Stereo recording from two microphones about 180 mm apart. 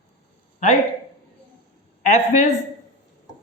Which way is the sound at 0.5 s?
40° left (ahead or behind).